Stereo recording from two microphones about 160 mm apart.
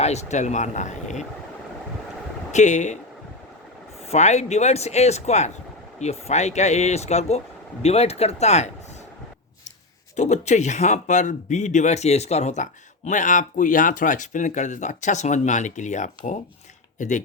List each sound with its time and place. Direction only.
0.0 s speech: 45° left (ahead or behind)
2.5 s speech: 50° left (ahead or behind)
4.1 s speech: 45° left (ahead or behind)
10.2 s speech: 45° left (ahead or behind)